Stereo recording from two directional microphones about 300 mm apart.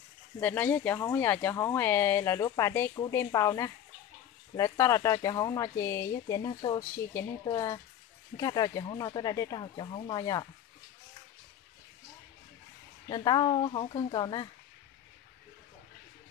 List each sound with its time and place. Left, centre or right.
0.4 s speech: centre
13.1 s speech: centre